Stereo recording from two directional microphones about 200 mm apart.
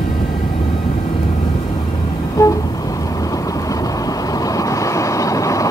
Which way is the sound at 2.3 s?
15° left (ahead or behind).